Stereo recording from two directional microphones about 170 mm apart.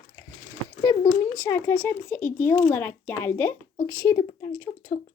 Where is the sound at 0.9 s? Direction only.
20° left (ahead or behind).